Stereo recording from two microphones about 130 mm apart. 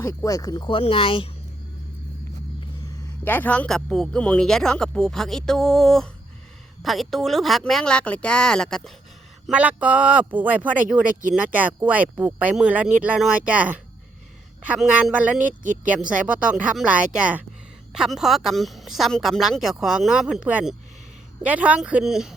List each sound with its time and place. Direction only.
0.0 s speech: 25° left (ahead or behind)
0.7 s speech: 45° left (ahead or behind)
3.2 s a woman's voice: 15° left (ahead or behind)
9.5 s speech: 10° right (ahead or behind)
15.6 s speech: 85° right
15.9 s a woman's voice: 10° right (ahead or behind)